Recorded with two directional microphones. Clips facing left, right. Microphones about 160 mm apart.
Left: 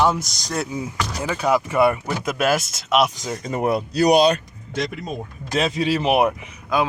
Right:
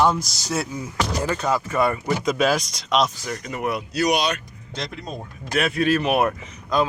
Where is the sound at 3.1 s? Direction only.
20° left (ahead or behind).